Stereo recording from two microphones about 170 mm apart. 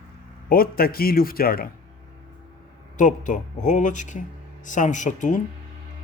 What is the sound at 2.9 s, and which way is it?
Speech, 50° left (ahead or behind).